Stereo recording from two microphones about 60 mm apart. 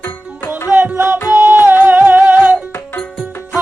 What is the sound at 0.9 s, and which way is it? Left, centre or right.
Music, right.